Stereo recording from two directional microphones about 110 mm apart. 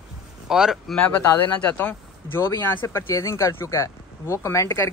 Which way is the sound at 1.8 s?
20° left (ahead or behind).